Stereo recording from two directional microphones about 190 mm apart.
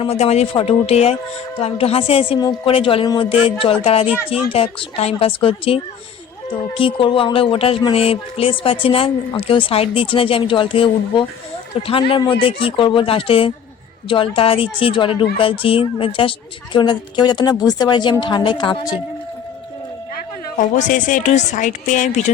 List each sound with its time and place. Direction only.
0.0 s speech: 30° left (ahead or behind)
20.7 s speech: 40° left (ahead or behind)